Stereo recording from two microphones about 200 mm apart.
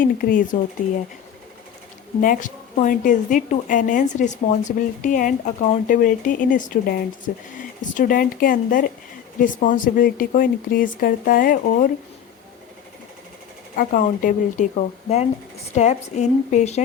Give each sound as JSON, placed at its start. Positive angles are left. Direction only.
{"t": 0.0, "sound": "a woman's voice", "side_deg": 45}
{"t": 2.2, "sound": "a woman's voice", "side_deg": 40}
{"t": 13.7, "sound": "a woman's voice", "side_deg": 40}